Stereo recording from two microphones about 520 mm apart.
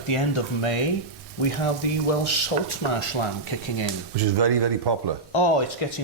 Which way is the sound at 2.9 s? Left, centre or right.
Left.